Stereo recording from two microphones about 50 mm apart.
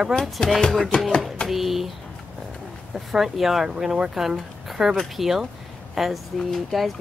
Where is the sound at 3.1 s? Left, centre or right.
Centre.